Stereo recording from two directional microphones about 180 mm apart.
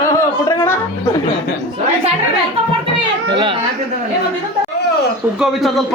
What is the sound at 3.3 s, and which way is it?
Speech, 25° right (ahead or behind).